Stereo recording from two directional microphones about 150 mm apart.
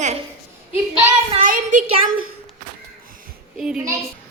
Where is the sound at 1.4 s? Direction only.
60° right (ahead or behind).